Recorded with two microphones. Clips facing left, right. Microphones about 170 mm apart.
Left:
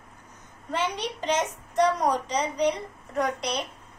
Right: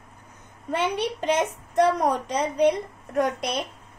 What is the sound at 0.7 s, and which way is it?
A woman's voice, 60° right (ahead or behind).